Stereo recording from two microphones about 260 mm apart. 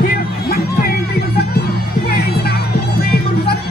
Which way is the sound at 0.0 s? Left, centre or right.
Left.